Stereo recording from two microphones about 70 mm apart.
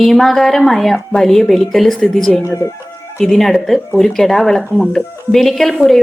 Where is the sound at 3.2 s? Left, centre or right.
Centre.